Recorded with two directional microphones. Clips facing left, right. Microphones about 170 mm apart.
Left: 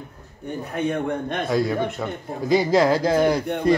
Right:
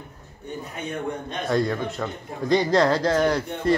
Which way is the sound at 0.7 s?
60° left (ahead or behind).